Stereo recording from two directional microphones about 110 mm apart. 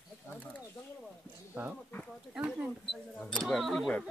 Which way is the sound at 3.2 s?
10° left (ahead or behind).